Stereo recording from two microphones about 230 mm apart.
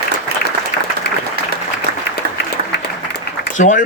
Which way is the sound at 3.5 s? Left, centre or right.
Left.